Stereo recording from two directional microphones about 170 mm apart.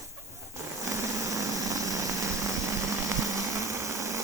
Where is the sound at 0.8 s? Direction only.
20° right (ahead or behind).